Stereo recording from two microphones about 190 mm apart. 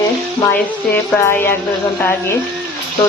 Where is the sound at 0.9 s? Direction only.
10° left (ahead or behind).